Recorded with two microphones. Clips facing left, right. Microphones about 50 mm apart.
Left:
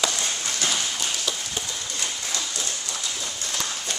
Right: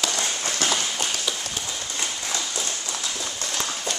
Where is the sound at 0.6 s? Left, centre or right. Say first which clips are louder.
Right 3 dB; right.